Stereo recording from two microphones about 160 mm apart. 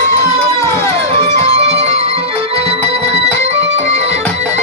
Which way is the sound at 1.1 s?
40° right (ahead or behind).